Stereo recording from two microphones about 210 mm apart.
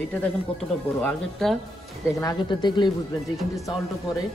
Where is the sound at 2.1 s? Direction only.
15° left (ahead or behind).